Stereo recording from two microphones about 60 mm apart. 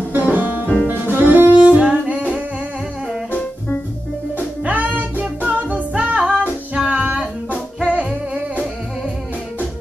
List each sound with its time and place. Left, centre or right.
0.1 s music: right
0.8 s saxophone: right
2.0 s humming: right
3.3 s music: left
4.6 s music: right